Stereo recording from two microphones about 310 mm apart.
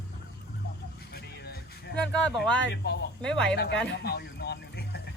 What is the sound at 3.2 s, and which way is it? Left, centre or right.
Speech, centre.